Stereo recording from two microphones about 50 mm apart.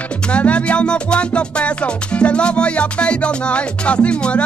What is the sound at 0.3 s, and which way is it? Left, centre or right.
Music, left.